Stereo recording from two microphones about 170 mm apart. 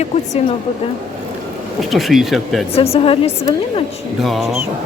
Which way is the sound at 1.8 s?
Centre (ahead or behind).